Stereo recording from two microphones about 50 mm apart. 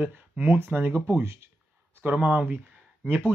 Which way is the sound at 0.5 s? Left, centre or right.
Right.